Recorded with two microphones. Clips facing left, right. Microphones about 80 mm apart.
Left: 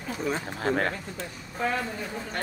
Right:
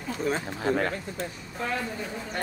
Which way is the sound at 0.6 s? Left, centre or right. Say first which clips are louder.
Even; left.